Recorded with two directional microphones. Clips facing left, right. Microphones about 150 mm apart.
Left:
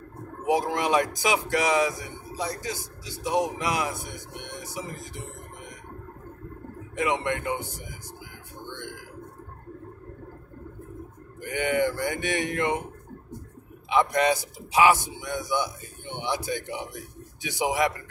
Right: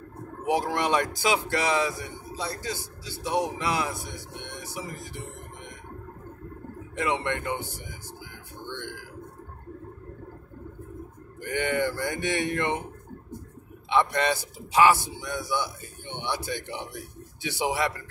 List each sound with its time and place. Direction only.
0.5 s speech: 20° left (ahead or behind)
7.0 s speech: 15° left (ahead or behind)
11.4 s speech: 15° left (ahead or behind)
13.8 s speech: 15° left (ahead or behind)